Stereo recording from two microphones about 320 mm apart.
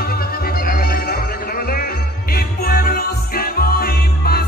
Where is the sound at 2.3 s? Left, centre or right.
Left.